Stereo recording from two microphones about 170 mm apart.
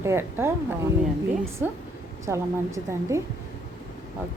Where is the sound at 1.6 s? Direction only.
10° right (ahead or behind).